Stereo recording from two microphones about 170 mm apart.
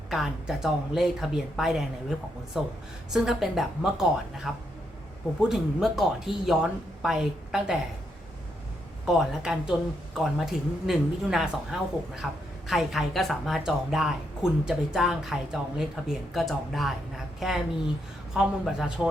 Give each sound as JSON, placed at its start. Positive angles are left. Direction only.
{"t": 0.1, "sound": "speech", "side_deg": 0}
{"t": 9.0, "sound": "speech", "side_deg": 0}